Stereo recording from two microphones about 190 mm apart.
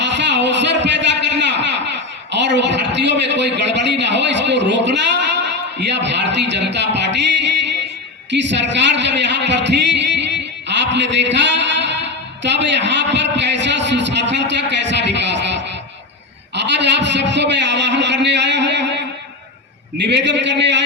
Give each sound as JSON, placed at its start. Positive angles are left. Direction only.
{"t": 0.0, "sound": "a sound", "side_deg": -65}
{"t": 6.0, "sound": "a woman's voice", "side_deg": -65}
{"t": 20.1, "sound": "a woman's voice", "side_deg": -65}